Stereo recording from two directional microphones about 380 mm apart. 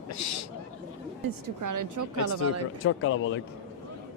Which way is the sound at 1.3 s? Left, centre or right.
Right.